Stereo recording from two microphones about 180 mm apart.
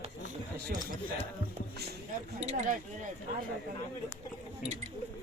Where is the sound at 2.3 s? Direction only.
40° right (ahead or behind).